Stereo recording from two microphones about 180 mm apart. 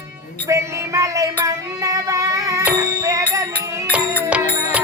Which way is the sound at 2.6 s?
15° right (ahead or behind).